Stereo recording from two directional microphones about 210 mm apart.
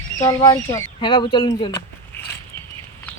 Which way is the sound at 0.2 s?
15° left (ahead or behind).